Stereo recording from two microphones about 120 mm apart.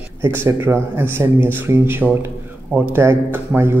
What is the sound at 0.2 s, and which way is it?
Speech, 20° right (ahead or behind).